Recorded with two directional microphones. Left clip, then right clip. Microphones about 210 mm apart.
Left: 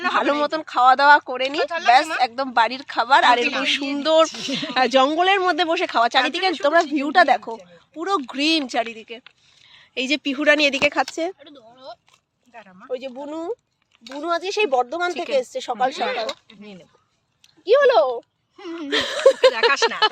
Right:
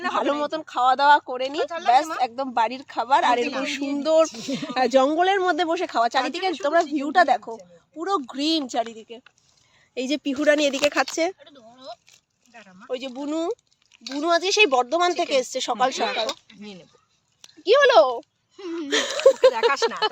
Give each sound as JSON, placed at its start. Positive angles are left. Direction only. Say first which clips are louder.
{"t": 0.1, "sound": "speech", "louder": "left 4 dB", "side_deg": 15}
{"t": 2.1, "sound": "speech", "louder": "left 4 dB", "side_deg": 5}
{"t": 5.9, "sound": "a woman's voice", "louder": "left 4 dB", "side_deg": 15}
{"t": 7.9, "sound": "speech", "louder": "left 3 dB", "side_deg": 15}
{"t": 9.7, "sound": "a sound", "louder": "left 4 dB", "side_deg": -5}
{"t": 10.1, "sound": "speech", "louder": "left 2 dB", "side_deg": -10}
{"t": 11.1, "sound": "speech", "louder": "right 2 dB", "side_deg": -30}
{"t": 11.3, "sound": "speech", "louder": "left 2 dB", "side_deg": 50}
{"t": 12.5, "sound": "a sound", "louder": "left 4 dB", "side_deg": 55}
{"t": 12.9, "sound": "speech", "louder": "even", "side_deg": -40}
{"t": 17.4, "sound": "speech", "louder": "left 1 dB", "side_deg": -40}
{"t": 18.9, "sound": "speech", "louder": "left 1 dB", "side_deg": -10}